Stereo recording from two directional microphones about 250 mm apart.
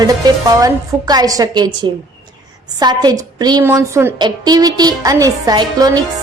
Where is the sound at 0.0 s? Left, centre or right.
Centre.